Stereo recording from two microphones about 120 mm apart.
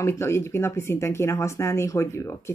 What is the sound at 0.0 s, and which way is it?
Speech, 20° left (ahead or behind).